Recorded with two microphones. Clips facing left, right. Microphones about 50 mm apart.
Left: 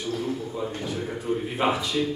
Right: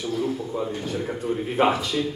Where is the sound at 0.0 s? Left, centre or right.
Centre.